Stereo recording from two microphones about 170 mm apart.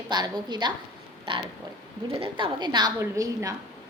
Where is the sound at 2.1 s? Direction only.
30° right (ahead or behind).